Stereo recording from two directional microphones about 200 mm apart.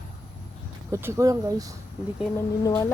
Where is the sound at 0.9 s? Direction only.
15° right (ahead or behind).